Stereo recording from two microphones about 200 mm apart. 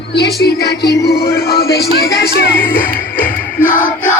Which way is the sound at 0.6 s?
55° left (ahead or behind).